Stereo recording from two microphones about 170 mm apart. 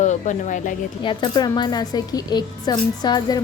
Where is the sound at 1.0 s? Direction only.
25° left (ahead or behind).